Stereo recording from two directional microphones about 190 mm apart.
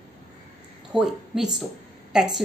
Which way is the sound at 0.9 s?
5° right (ahead or behind).